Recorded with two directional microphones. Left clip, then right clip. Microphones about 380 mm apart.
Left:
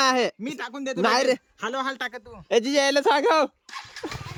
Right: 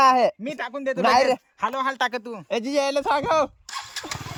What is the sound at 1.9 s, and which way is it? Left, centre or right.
Speech, centre.